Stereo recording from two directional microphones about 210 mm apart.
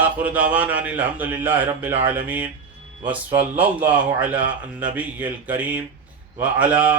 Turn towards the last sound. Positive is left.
turn(degrees=-10)  # may be behind; listen again after turning